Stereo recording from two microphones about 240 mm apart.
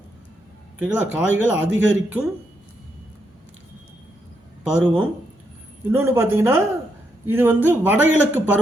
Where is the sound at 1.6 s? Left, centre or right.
Right.